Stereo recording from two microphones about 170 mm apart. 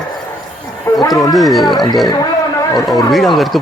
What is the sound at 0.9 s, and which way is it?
Speech, 20° left (ahead or behind).